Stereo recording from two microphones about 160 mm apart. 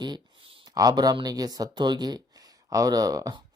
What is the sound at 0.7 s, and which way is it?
Speech, 25° right (ahead or behind).